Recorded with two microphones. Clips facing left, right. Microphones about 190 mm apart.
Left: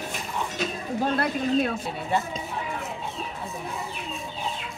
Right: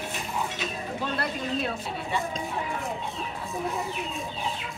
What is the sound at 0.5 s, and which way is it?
Speech, 50° left (ahead or behind).